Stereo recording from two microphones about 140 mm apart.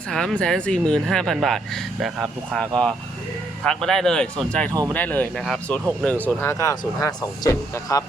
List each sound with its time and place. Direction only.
0.1 s speech: 5° left (ahead or behind); by 8.0 s 25° left (ahead or behind)